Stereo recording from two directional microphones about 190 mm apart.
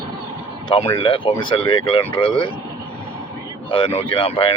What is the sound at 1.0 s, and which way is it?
Speech, 25° left (ahead or behind).